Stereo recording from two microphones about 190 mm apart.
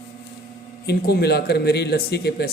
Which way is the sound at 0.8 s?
55° left (ahead or behind).